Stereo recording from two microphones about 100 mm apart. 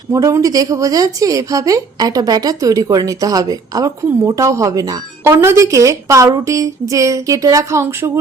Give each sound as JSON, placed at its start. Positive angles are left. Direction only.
{"t": 0.1, "sound": "a woman's voice", "side_deg": -30}
{"t": 5.2, "sound": "a woman's voice", "side_deg": -25}